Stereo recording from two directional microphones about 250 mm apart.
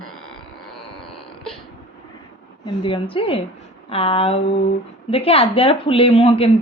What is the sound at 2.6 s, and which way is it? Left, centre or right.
Speech, centre.